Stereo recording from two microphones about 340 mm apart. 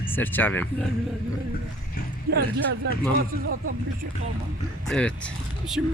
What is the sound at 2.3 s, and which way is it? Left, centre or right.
Speech, right.